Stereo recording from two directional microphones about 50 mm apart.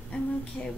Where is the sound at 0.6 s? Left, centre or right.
Centre.